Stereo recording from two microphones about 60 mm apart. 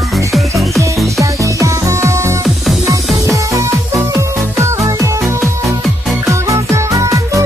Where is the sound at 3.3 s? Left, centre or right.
Right.